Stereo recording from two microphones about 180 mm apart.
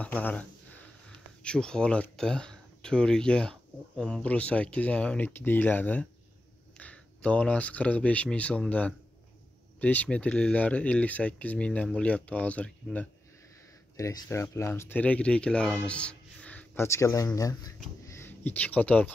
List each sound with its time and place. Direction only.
0.0 s speech: 10° left (ahead or behind)
13.9 s speech: 20° left (ahead or behind)
18.0 s a sound: 15° left (ahead or behind)